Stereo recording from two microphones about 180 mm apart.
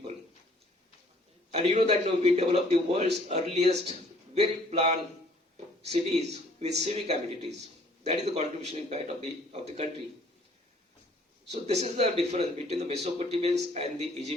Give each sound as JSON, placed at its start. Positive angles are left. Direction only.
{"t": 1.5, "sound": "a man's voice", "side_deg": -35}
{"t": 11.5, "sound": "a man's voice", "side_deg": -35}